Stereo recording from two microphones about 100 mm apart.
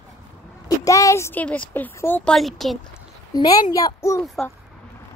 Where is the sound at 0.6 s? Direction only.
35° left (ahead or behind).